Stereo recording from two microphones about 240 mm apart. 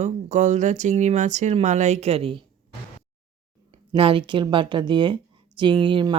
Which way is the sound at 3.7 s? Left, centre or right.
Right.